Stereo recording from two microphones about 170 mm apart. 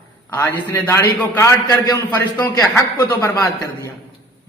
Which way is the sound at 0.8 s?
15° left (ahead or behind).